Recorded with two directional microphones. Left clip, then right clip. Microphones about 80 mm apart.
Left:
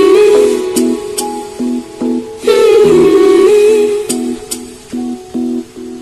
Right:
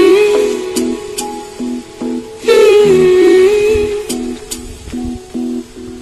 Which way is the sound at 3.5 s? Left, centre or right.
Left.